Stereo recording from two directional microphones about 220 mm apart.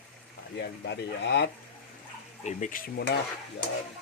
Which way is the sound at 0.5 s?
50° left (ahead or behind).